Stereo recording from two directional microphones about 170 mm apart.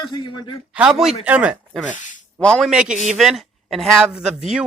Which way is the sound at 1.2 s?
10° right (ahead or behind).